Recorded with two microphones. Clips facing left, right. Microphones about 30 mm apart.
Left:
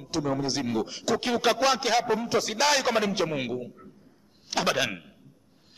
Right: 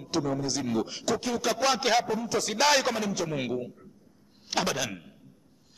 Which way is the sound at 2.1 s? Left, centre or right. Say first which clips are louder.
Left 3 dB; left.